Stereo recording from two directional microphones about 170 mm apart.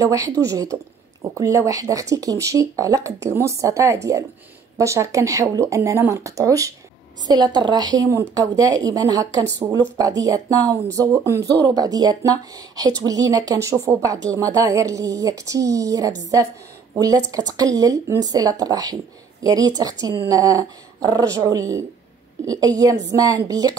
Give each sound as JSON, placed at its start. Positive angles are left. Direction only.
{"t": 0.0, "sound": "speech", "side_deg": -20}